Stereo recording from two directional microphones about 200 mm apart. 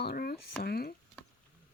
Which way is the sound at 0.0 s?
50° left (ahead or behind).